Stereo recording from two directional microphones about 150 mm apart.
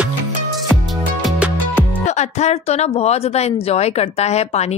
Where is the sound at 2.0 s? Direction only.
50° left (ahead or behind).